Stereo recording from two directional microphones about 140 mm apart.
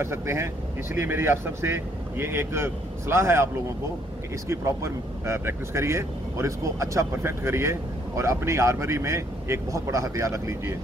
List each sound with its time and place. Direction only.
0.0 s speech: 20° right (ahead or behind)
4.5 s speech: 20° right (ahead or behind)